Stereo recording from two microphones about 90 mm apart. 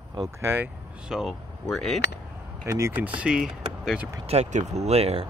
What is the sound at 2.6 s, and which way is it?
Speech, 35° right (ahead or behind).